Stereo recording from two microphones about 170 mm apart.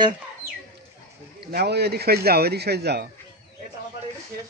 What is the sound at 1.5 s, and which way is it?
A man's voice, 70° right (ahead or behind).